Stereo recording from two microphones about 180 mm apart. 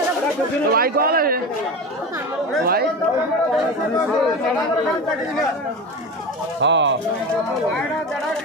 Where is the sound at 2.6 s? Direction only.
60° right (ahead or behind).